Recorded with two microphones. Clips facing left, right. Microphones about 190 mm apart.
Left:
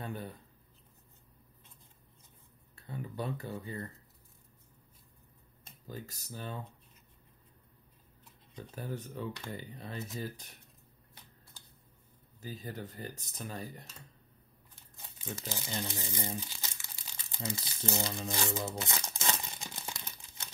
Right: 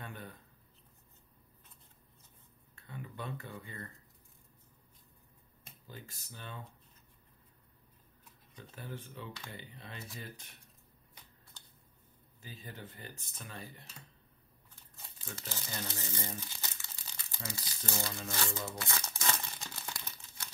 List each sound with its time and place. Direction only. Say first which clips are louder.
0.0 s a sound: left 6 dB; 30° left (ahead or behind)
2.7 s speech: left 5 dB; 35° left (ahead or behind)
5.9 s speech: left 7 dB; 40° left (ahead or behind)
8.5 s speech: left 5 dB; 40° left (ahead or behind)
12.4 s speech: left 7 dB; 40° left (ahead or behind)
15.0 s speech: left 6 dB; 15° left (ahead or behind)
18.6 s crumpling: left 3 dB; 20° left (ahead or behind)